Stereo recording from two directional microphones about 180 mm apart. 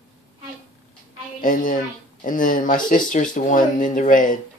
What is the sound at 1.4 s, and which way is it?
Speech, 50° left (ahead or behind).